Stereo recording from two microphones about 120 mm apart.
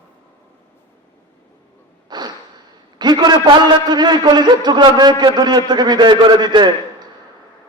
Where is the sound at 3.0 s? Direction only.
35° right (ahead or behind).